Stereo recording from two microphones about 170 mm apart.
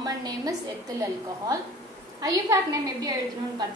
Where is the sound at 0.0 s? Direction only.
20° right (ahead or behind).